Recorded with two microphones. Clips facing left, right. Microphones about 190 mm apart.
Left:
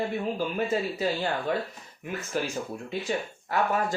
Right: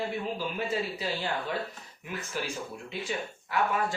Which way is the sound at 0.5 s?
45° left (ahead or behind).